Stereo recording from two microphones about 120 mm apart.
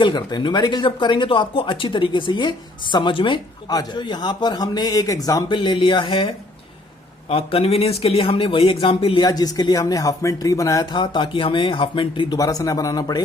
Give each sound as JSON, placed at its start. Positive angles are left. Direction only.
{"t": 0.0, "sound": "speech", "side_deg": 35}
{"t": 5.5, "sound": "speech", "side_deg": 45}
{"t": 9.2, "sound": "speech", "side_deg": 35}
{"t": 10.9, "sound": "speech", "side_deg": 40}
{"t": 12.4, "sound": "speech", "side_deg": 30}